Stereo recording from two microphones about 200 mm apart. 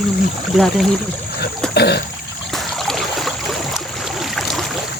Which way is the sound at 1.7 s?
55° left (ahead or behind).